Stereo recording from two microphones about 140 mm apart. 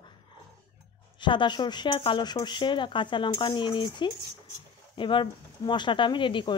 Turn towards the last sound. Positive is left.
turn(degrees=35)  # may be behind; listen again after turning